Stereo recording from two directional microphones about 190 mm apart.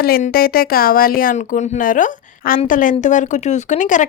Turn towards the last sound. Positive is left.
turn(degrees=40)  # may be behind; listen again after turning